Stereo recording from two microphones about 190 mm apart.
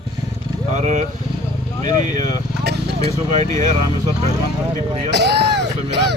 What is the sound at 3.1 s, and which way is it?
Music, 35° right (ahead or behind).